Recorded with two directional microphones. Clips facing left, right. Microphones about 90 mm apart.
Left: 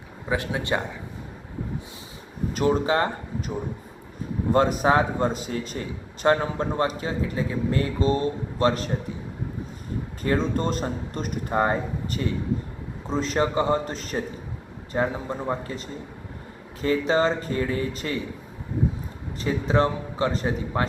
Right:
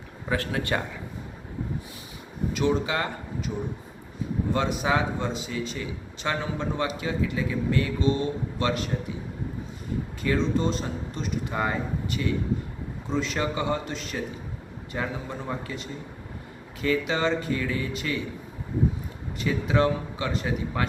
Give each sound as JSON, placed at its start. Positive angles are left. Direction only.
{"t": 0.3, "sound": "speech", "side_deg": 20}
{"t": 2.5, "sound": "a man's voice", "side_deg": 40}
{"t": 4.5, "sound": "a man's voice", "side_deg": 45}
{"t": 10.2, "sound": "a man's voice", "side_deg": 45}
{"t": 19.4, "sound": "a man's voice", "side_deg": 35}